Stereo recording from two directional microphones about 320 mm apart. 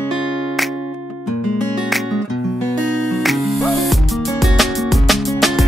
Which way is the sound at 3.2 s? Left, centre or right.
Centre.